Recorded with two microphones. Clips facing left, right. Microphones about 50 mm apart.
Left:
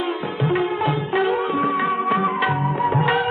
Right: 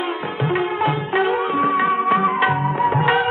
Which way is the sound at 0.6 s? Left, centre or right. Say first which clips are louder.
Right 1 dB; centre.